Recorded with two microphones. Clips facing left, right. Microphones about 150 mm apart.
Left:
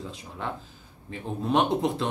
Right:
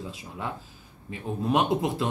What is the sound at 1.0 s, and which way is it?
Speech, 5° right (ahead or behind).